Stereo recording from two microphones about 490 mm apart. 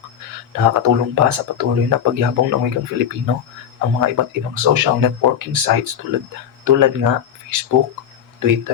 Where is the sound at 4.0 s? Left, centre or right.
Right.